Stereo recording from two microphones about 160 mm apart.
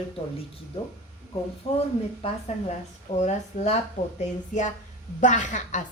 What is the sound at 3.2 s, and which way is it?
Speech, 45° left (ahead or behind).